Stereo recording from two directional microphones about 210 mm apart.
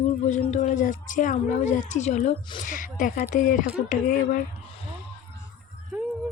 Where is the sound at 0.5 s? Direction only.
35° left (ahead or behind).